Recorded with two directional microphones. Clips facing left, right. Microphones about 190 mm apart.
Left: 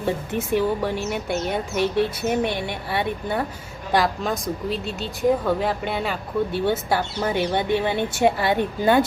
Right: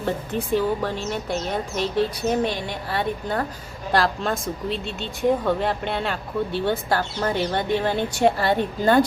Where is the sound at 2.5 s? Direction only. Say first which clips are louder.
Left 2 dB; 60° left (ahead or behind).